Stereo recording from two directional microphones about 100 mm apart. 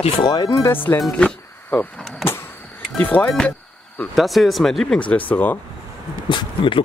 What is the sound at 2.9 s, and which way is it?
Speech, 15° left (ahead or behind).